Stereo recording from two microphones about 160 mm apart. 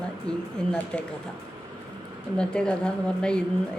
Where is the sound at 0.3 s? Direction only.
5° left (ahead or behind).